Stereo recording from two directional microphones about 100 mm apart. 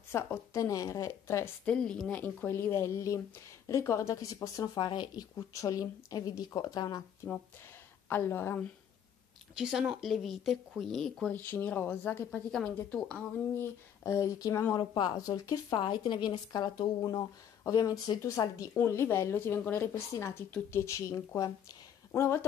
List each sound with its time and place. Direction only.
0.1 s a woman's voice: 25° left (ahead or behind)
1.7 s a woman's voice: 10° left (ahead or behind); by 4.6 s 35° left (ahead or behind)
4.7 s speech: 50° left (ahead or behind)
8.1 s a woman's voice: 20° left (ahead or behind)
9.6 s speech: 5° right (ahead or behind)
11.3 s a woman's voice: 20° left (ahead or behind)
12.4 s speech: 10° left (ahead or behind)
13.6 s a woman's voice: 30° left (ahead or behind)
14.8 s speech: 50° left (ahead or behind)
15.7 s a woman's voice: 50° left (ahead or behind); by 18.7 s 35° left (ahead or behind)
18.8 s a woman's voice: 25° left (ahead or behind)